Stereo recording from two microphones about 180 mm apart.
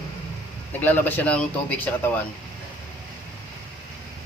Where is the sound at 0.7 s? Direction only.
10° left (ahead or behind).